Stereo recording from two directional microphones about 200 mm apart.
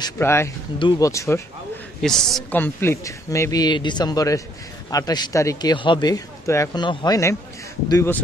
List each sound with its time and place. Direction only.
0.0 s speech: 10° left (ahead or behind)
2.0 s a man's voice: centre (ahead or behind)